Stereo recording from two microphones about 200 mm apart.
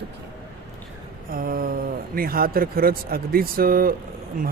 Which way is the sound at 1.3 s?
45° right (ahead or behind).